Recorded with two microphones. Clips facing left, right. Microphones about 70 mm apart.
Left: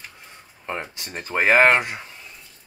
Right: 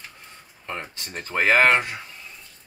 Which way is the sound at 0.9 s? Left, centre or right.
Centre.